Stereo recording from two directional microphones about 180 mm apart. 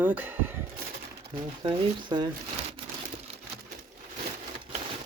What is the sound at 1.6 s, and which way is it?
Speech, 25° right (ahead or behind).